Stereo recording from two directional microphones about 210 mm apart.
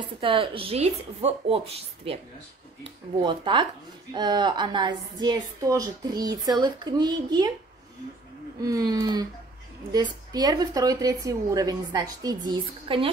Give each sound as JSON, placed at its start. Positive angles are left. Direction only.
{"t": 0.2, "sound": "a woman's voice", "side_deg": -25}
{"t": 3.2, "sound": "a woman's voice", "side_deg": -20}
{"t": 8.5, "sound": "a woman's voice", "side_deg": -15}